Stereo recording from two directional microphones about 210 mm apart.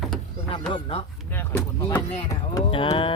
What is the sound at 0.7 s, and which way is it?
Speech, 25° left (ahead or behind).